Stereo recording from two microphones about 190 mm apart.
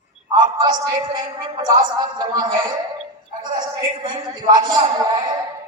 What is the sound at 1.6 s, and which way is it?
Speech, 25° right (ahead or behind).